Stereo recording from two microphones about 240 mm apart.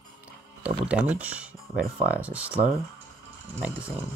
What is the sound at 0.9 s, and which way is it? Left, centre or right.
Speech, centre.